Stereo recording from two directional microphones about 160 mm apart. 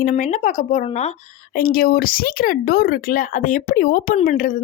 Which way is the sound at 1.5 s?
65° left (ahead or behind).